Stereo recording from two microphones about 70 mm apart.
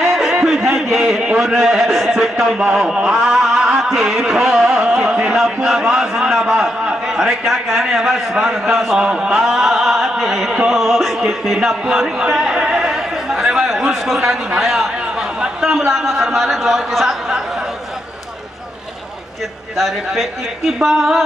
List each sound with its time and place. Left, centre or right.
0.0 s a man's voice: centre
2.5 s a man's voice: centre
2.8 s a sound: centre
5.4 s a man's voice: centre
9.0 s a sound: centre
10.7 s a man's voice: centre
12.2 s chatter: centre
14.6 s a sound: centre
20.8 s a man's voice: centre